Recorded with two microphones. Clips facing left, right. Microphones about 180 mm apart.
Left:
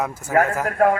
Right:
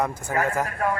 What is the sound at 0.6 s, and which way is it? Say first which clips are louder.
Speech: left 8 dB; 65° left (ahead or behind).